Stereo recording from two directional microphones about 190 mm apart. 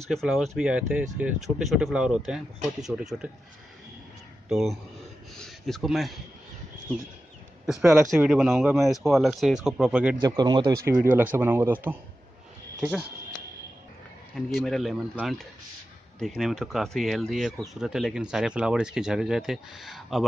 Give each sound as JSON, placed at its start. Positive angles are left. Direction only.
{"t": 0.1, "sound": "speech", "side_deg": 0}
{"t": 4.5, "sound": "speech", "side_deg": 0}
{"t": 7.9, "sound": "speech", "side_deg": 0}
{"t": 10.2, "sound": "speech", "side_deg": -20}
{"t": 11.3, "sound": "speech", "side_deg": -10}
{"t": 14.3, "sound": "speech", "side_deg": 0}